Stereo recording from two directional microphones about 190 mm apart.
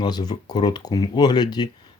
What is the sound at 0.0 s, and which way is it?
Speech, 20° left (ahead or behind).